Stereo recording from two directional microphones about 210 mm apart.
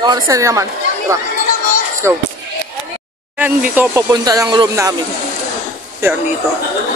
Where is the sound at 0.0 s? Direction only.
20° right (ahead or behind).